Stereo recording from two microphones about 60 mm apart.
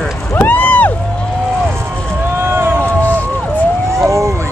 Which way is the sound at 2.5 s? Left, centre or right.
Right.